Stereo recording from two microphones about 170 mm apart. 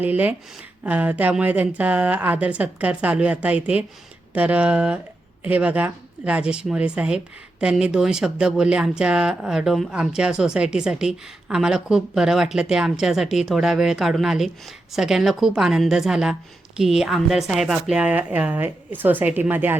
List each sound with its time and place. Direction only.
0.0 s speech: 10° right (ahead or behind)